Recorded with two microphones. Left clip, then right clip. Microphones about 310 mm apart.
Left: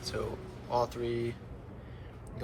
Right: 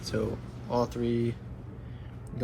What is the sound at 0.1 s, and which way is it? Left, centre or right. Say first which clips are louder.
Speech: right 6 dB; right.